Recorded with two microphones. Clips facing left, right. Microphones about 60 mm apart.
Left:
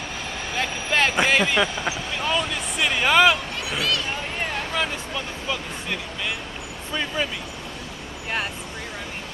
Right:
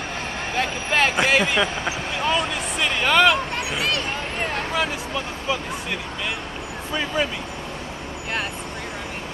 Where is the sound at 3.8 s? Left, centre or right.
Right.